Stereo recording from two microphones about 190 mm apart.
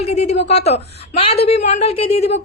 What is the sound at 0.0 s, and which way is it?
A woman's voice, 35° left (ahead or behind).